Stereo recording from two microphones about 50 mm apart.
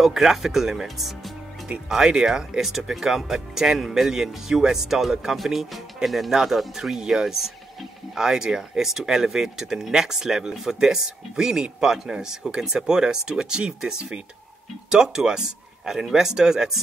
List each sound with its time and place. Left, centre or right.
0.0 s speech: centre
1.9 s speech: centre